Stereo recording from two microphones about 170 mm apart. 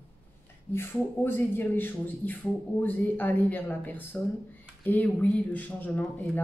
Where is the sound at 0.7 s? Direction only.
15° left (ahead or behind).